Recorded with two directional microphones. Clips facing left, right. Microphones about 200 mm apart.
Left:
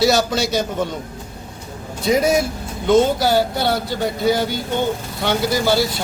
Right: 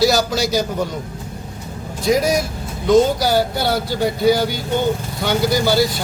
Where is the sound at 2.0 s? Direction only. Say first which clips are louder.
Left 1 dB; centre (ahead or behind).